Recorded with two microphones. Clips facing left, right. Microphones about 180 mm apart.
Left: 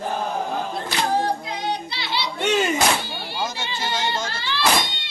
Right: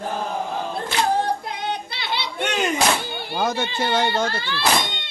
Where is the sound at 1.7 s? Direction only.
55° right (ahead or behind).